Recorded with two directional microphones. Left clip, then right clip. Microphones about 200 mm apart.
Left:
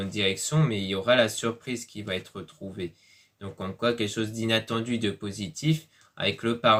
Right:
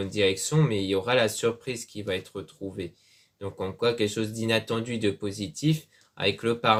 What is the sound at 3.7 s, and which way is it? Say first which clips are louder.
Speech: right 1 dB; 35° right (ahead or behind).